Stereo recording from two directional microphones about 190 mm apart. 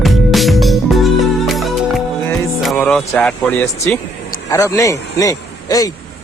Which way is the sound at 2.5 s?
5° left (ahead or behind).